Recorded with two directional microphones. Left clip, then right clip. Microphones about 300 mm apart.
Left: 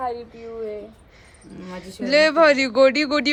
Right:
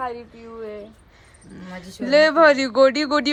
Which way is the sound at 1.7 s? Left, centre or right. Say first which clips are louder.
Right 1 dB; centre.